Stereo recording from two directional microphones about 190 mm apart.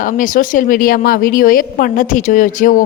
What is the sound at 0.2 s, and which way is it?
A woman's voice, 45° left (ahead or behind).